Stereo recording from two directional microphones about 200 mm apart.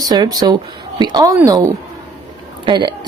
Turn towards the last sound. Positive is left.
turn(degrees=-20)  # may be behind; listen again after turning